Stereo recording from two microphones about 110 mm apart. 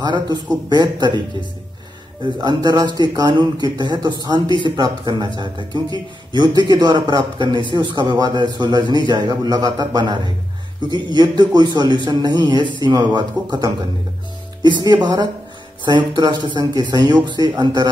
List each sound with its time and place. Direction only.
0.0 s a man's voice: 40° right (ahead or behind)
2.4 s a man's voice: 40° right (ahead or behind)